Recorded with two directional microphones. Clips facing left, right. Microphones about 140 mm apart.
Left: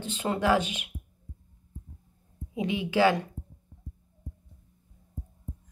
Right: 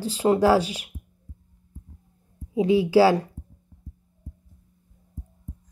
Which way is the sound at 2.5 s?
35° right (ahead or behind).